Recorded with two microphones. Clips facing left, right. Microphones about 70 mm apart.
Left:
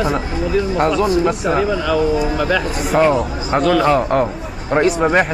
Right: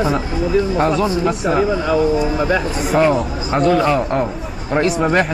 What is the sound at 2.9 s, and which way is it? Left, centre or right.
A man's voice, centre.